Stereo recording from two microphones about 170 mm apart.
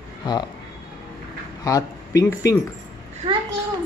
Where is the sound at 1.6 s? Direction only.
20° left (ahead or behind).